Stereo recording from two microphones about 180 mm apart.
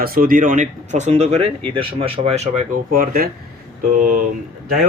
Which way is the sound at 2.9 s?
55° right (ahead or behind).